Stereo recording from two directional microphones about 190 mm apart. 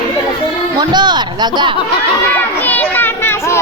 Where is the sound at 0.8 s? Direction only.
25° right (ahead or behind).